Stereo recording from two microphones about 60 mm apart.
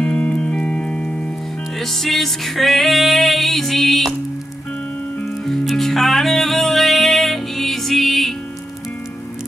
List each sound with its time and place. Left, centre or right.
0.0 s music: centre
1.8 s music: centre
5.2 s music: centre